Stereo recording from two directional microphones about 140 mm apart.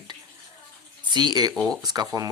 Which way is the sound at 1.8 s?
25° right (ahead or behind).